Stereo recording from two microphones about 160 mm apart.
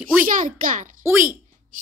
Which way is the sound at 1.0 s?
15° right (ahead or behind).